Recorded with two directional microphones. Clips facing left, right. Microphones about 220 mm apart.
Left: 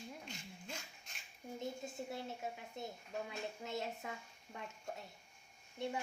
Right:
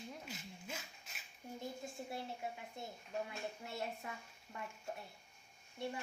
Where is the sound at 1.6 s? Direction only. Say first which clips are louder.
Left 2 dB; 20° left (ahead or behind).